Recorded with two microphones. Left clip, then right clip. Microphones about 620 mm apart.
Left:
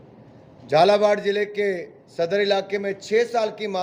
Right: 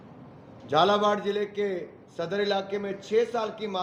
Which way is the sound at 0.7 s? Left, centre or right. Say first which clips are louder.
Left 6 dB; left.